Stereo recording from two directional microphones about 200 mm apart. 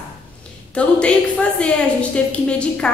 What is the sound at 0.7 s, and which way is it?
A woman's voice, 5° left (ahead or behind).